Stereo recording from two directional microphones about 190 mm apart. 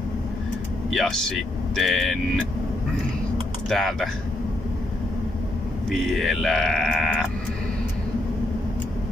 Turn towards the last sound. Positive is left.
turn(degrees=0)  # may be behind; listen again after turning